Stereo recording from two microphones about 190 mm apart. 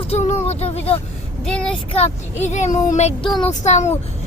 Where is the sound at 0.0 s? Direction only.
35° left (ahead or behind).